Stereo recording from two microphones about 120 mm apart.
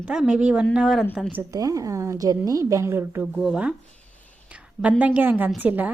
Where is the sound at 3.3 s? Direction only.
5° right (ahead or behind).